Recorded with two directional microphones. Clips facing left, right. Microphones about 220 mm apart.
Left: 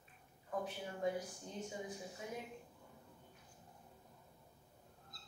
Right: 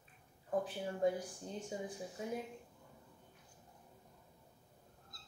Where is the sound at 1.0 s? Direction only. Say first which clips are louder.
Right 5 dB; 30° right (ahead or behind).